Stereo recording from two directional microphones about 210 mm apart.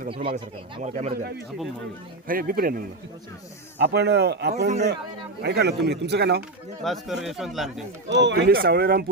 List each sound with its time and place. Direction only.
0.1 s speech: 25° right (ahead or behind)
1.1 s speech: 45° right (ahead or behind)
3.8 s speech: 55° right (ahead or behind)
6.8 s speech: centre (ahead or behind)
8.1 s speech: 55° right (ahead or behind)